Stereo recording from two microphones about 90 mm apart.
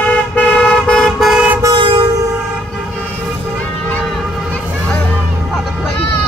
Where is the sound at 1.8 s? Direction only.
70° right (ahead or behind).